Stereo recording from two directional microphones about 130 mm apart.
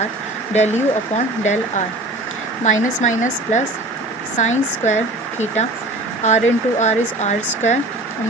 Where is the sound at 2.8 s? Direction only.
80° left; by 7.8 s 65° left (ahead or behind).